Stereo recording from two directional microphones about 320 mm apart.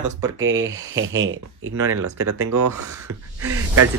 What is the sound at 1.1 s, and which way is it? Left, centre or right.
Speech, right.